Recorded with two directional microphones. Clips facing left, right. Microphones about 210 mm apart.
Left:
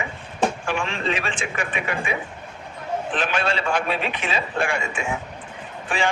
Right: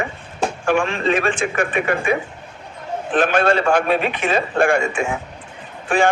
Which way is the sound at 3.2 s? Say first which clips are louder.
Right 11 dB; 50° right (ahead or behind).